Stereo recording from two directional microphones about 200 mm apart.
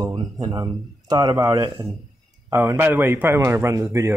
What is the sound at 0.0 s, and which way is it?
A man's voice, 20° right (ahead or behind).